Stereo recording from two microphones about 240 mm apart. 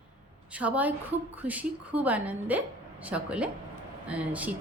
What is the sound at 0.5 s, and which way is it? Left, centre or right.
A woman's voice, centre.